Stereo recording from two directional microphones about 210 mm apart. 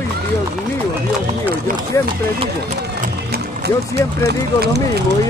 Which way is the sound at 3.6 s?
50° right (ahead or behind).